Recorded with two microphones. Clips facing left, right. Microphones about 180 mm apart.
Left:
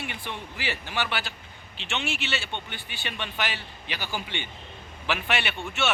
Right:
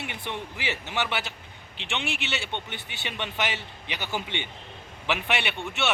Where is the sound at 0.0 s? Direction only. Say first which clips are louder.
Right 1 dB; 20° right (ahead or behind).